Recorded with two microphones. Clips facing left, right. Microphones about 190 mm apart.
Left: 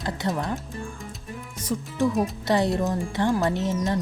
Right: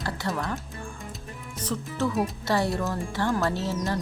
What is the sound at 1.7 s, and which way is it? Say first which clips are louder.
Speech: left 4 dB; 15° left (ahead or behind).